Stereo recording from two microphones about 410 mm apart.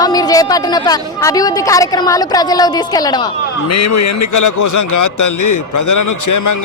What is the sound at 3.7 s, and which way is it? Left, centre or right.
Speech, left.